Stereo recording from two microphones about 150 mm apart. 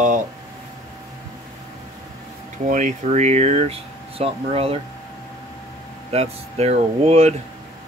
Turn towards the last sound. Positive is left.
turn(degrees=-45)  # may be behind; listen again after turning